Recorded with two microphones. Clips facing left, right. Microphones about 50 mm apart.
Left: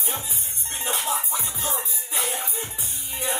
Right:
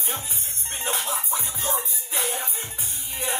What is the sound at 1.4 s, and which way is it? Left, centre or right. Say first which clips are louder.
Music: right 1 dB; right.